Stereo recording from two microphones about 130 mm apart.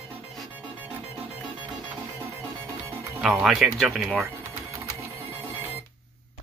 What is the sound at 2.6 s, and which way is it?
Music, 15° right (ahead or behind).